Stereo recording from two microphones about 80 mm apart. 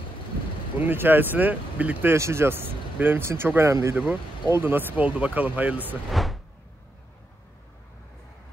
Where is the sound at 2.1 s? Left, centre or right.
Right.